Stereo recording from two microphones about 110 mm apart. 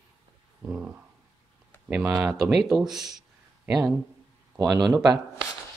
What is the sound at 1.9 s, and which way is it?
Speech, 15° right (ahead or behind).